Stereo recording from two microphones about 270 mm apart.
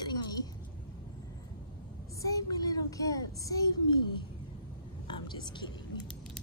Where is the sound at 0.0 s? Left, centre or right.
Centre.